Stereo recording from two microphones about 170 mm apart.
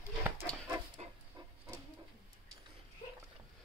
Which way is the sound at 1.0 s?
40° right (ahead or behind).